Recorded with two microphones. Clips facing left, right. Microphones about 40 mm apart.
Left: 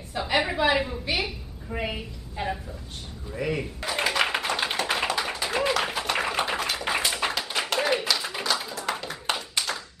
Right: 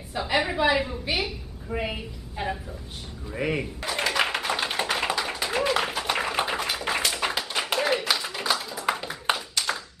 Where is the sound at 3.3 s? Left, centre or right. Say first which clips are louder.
Right 1 dB; right.